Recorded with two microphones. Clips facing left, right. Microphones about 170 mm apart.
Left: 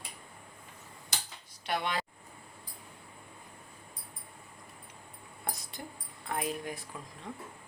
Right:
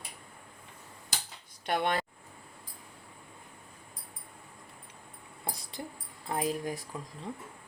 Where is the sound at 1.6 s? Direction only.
50° right (ahead or behind).